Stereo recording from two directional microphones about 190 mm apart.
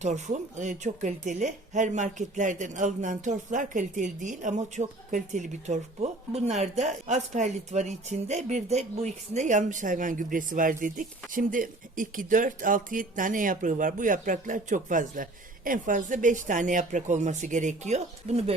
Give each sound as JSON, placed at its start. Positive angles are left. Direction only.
{"t": 0.0, "sound": "speech", "side_deg": -40}